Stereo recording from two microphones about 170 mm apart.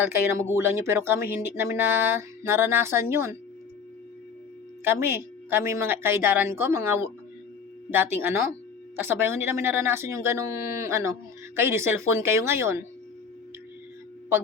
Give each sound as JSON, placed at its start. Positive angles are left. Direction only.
{"t": 0.3, "sound": "speech", "side_deg": -15}
{"t": 4.8, "sound": "speech", "side_deg": -15}